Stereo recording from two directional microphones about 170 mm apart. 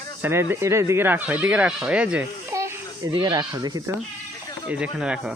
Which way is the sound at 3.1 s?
25° right (ahead or behind).